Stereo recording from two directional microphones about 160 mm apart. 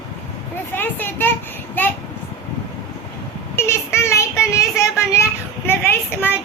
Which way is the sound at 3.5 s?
15° left (ahead or behind).